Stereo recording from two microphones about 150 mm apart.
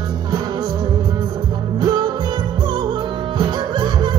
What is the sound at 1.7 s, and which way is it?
Music, 30° right (ahead or behind).